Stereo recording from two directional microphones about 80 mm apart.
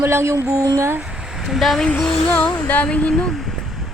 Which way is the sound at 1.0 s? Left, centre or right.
Centre.